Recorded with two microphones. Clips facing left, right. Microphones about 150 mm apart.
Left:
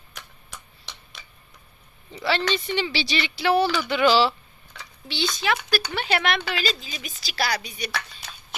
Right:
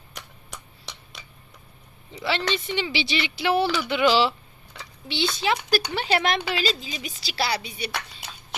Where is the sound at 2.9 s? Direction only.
20° right (ahead or behind).